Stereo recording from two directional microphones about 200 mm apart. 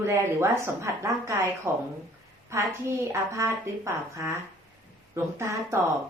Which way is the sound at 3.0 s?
15° right (ahead or behind).